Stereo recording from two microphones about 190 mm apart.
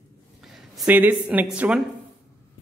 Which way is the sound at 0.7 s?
5° right (ahead or behind).